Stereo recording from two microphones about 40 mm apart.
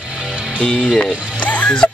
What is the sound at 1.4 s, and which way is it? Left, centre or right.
Music, left.